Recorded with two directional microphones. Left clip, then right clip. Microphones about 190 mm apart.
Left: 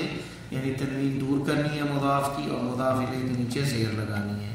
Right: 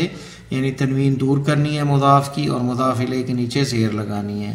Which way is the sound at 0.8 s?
35° right (ahead or behind).